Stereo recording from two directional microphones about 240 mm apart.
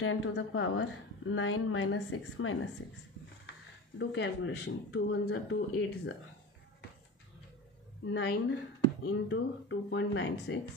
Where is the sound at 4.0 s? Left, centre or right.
Left.